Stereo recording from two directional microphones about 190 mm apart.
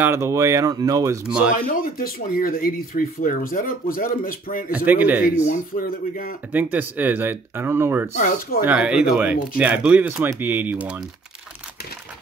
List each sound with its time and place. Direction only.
0.0 s speech: 15° right (ahead or behind)
1.2 s speech: 5° right (ahead or behind)
1.5 s speech: 45° left (ahead or behind)
4.7 s speech: 10° right (ahead or behind)
5.4 s speech: 45° left (ahead or behind)
6.5 s speech: 10° right (ahead or behind)
8.1 s speech: 45° left (ahead or behind)
8.6 s speech: 5° right (ahead or behind)